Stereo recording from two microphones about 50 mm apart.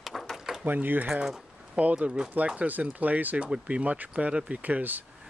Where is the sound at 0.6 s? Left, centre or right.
Right.